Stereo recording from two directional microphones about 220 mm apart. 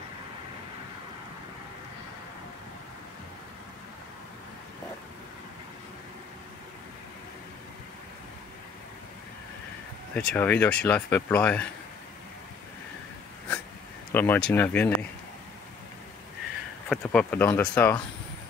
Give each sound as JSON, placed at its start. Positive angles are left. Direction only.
{"t": 10.1, "sound": "speech", "side_deg": 5}
{"t": 14.1, "sound": "speech", "side_deg": 10}
{"t": 16.9, "sound": "speech", "side_deg": 5}